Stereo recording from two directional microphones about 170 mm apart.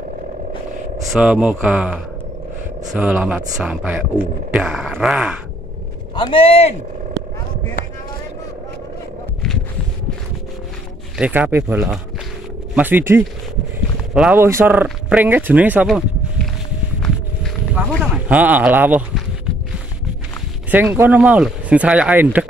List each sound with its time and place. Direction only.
1.1 s speech: 5° right (ahead or behind)
3.0 s speech: 10° right (ahead or behind)
6.1 s speech: 30° left (ahead or behind)
11.1 s speech: 10° right (ahead or behind)
18.1 s speech: 10° right (ahead or behind)
20.7 s speech: 10° right (ahead or behind)